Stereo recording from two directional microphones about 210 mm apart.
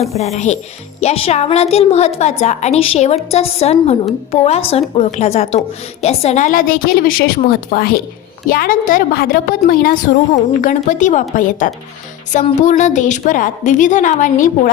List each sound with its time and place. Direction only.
0.0 s a woman's voice: 30° left (ahead or behind)